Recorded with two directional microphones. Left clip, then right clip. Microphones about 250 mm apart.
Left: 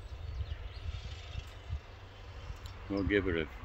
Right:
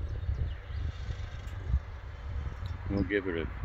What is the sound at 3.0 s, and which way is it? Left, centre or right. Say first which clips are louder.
Speech: even; centre.